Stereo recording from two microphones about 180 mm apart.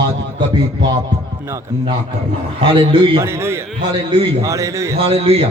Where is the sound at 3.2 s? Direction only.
15° right (ahead or behind).